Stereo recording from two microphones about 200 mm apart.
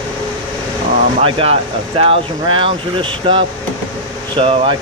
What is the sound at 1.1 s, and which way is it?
Speech, 30° right (ahead or behind).